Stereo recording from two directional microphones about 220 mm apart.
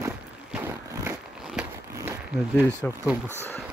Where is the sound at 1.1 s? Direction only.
10° right (ahead or behind).